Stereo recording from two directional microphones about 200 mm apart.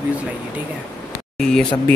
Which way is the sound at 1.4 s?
Centre (ahead or behind).